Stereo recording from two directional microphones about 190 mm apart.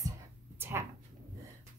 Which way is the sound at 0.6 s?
15° right (ahead or behind).